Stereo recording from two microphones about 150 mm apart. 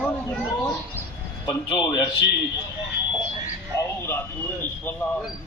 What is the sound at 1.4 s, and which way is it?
Speech, 30° left (ahead or behind).